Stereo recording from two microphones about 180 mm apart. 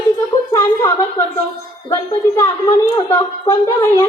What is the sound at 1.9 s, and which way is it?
A woman's voice, 15° left (ahead or behind).